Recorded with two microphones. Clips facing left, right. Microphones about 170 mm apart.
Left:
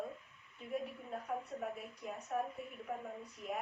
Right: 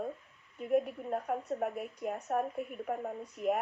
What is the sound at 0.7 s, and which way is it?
A woman's voice, 55° right (ahead or behind).